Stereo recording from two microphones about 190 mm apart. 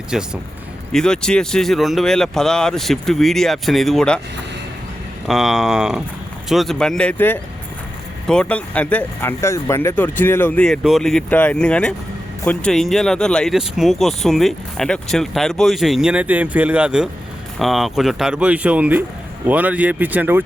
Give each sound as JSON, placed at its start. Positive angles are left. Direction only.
{"t": 0.1, "sound": "speech", "side_deg": -5}
{"t": 5.3, "sound": "speech", "side_deg": 0}